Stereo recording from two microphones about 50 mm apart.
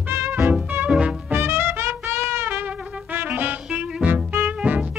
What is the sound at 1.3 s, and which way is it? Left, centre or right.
Music, right.